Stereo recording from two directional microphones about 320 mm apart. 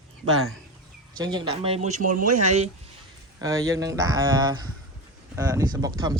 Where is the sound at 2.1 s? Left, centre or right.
Right.